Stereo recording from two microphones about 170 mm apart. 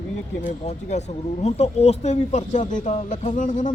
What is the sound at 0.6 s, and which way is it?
Speech, 40° left (ahead or behind).